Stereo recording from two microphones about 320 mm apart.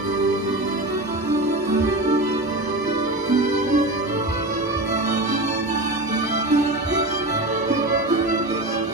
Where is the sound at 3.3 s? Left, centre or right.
Right.